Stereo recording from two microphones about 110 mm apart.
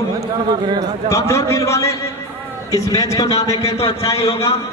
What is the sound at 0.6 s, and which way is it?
Speech, 45° right (ahead or behind).